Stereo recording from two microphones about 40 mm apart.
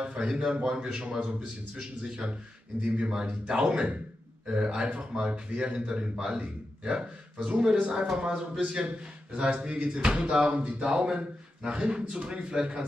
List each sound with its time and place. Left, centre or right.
0.0 s a man's voice: right
0.3 s a man's voice: centre